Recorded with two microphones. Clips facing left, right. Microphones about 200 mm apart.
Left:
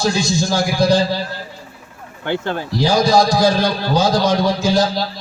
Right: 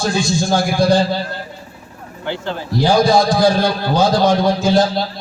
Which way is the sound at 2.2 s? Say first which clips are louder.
Left 3 dB; 55° left (ahead or behind).